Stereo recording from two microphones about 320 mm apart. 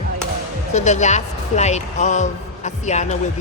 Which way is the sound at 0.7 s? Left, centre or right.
Left.